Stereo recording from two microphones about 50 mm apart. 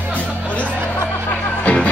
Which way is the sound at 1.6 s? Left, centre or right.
Left.